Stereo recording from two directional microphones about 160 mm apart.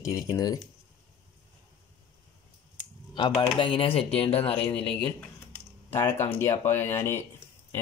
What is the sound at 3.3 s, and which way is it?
Speech, 30° left (ahead or behind).